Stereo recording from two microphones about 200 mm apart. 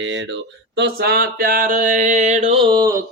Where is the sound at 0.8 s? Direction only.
50° right (ahead or behind); by 2.9 s 20° right (ahead or behind).